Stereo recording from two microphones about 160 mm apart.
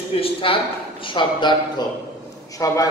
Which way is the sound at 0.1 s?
35° left (ahead or behind).